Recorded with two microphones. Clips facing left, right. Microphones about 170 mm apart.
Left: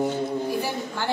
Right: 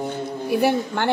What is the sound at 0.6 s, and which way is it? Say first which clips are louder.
Speech: right 9 dB; 65° right (ahead or behind).